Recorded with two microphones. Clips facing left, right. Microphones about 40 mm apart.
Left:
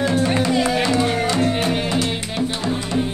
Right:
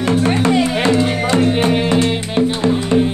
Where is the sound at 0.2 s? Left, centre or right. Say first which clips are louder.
Right 4 dB; right.